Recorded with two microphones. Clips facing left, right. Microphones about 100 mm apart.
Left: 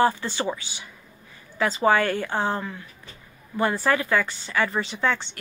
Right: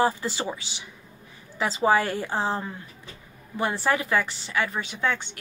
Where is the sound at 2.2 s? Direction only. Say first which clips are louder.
Left 1 dB; 5° right (ahead or behind).